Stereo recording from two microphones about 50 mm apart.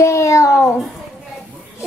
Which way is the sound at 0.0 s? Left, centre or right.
Left.